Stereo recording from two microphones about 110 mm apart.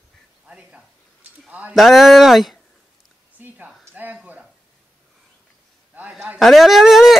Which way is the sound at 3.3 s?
15° right (ahead or behind).